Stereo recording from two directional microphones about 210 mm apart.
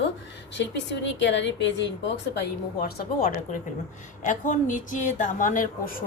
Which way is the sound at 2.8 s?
40° left (ahead or behind).